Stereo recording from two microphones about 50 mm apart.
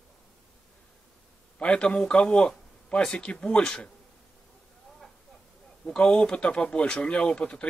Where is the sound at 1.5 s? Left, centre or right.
Left.